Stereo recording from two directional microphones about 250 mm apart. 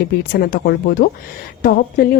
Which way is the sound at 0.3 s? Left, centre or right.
Left.